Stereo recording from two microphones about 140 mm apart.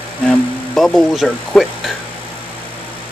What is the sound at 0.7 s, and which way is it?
Speech, centre (ahead or behind).